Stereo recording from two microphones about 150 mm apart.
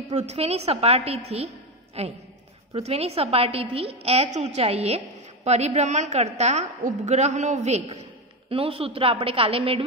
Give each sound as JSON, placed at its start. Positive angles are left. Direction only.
{"t": 0.1, "sound": "a woman's voice", "side_deg": -45}
{"t": 8.5, "sound": "a woman's voice", "side_deg": -40}